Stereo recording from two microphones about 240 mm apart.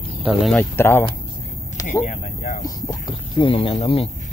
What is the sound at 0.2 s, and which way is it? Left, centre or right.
Speech, centre.